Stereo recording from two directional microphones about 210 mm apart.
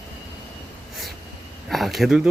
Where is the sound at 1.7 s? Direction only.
Centre (ahead or behind).